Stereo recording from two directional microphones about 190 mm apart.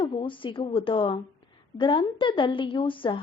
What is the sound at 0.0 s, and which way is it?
Speech, 25° left (ahead or behind).